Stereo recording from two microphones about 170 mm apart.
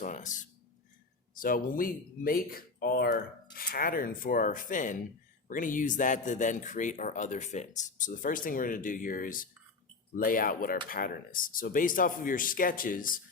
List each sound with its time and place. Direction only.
0.0 s speech: 50° left (ahead or behind)